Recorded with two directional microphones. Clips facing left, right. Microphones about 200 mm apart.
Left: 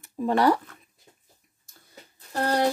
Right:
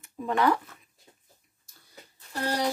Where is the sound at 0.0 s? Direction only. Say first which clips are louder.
Left 4 dB; 35° left (ahead or behind).